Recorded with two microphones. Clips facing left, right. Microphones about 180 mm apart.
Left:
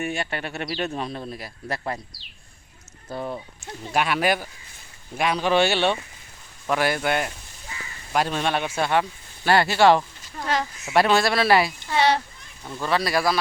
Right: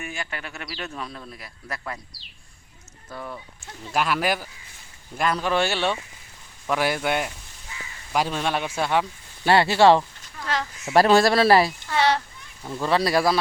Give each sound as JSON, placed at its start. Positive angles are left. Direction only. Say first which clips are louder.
{"t": 0.2, "sound": "speech", "louder": "left 5 dB", "side_deg": 30}
{"t": 3.1, "sound": "speech", "louder": "left 5 dB", "side_deg": 30}
{"t": 3.9, "sound": "speech", "louder": "left 1 dB", "side_deg": 0}
{"t": 6.7, "sound": "speech", "louder": "left 1 dB", "side_deg": -5}
{"t": 9.4, "sound": "speech", "louder": "right 1 dB", "side_deg": -25}
{"t": 10.4, "sound": "speech", "louder": "left 3 dB", "side_deg": 15}
{"t": 10.8, "sound": "speech", "louder": "right 3 dB", "side_deg": -35}
{"t": 11.9, "sound": "speech", "louder": "left 1 dB", "side_deg": 15}
{"t": 12.6, "sound": "speech", "louder": "right 3 dB", "side_deg": -5}
{"t": 12.9, "sound": "speech", "louder": "right 2 dB", "side_deg": -30}